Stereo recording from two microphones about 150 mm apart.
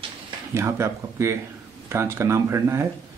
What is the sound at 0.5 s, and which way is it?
Speech, 20° right (ahead or behind).